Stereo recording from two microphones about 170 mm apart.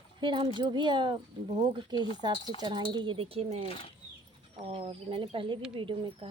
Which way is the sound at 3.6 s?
35° left (ahead or behind).